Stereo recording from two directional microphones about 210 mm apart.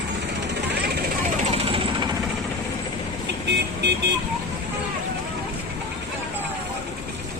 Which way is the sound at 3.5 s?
55° right (ahead or behind).